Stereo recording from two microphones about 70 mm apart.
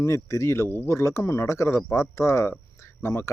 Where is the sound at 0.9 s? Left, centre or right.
Left.